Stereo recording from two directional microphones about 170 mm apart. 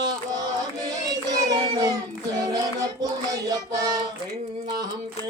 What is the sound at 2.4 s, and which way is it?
Child singing, 20° right (ahead or behind).